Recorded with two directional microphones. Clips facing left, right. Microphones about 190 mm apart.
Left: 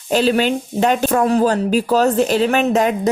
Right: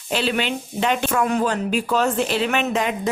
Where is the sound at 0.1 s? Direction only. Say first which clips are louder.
Left 7 dB; 40° left (ahead or behind).